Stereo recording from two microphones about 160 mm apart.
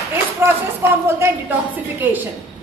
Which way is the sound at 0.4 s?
15° right (ahead or behind).